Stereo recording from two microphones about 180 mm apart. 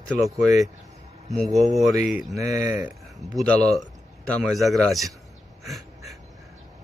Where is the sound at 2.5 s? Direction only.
10° right (ahead or behind).